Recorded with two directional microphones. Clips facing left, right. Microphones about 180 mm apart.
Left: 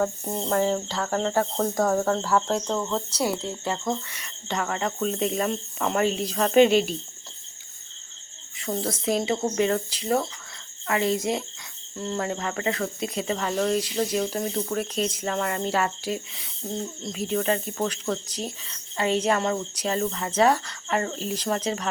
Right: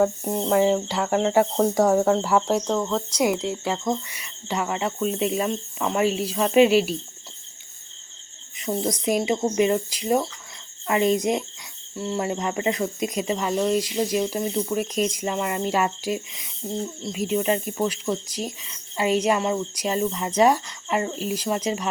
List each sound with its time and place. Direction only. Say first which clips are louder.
0.0 s speech: right 5 dB; 10° right (ahead or behind)
8.5 s speech: right 3 dB; 15° right (ahead or behind)